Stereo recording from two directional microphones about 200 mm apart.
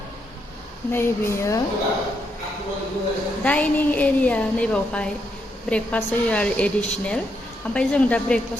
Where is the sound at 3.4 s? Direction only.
5° left (ahead or behind).